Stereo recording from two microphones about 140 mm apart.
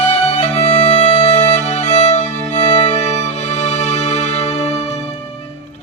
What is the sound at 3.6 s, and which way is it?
Music, 55° left (ahead or behind).